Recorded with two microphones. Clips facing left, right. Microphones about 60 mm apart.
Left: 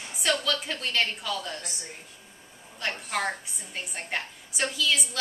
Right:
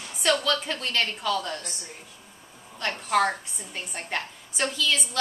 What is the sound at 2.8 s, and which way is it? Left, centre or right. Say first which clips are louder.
A woman's voice: right 6 dB; centre.